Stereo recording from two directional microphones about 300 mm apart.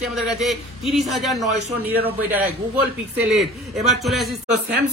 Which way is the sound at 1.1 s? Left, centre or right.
Centre.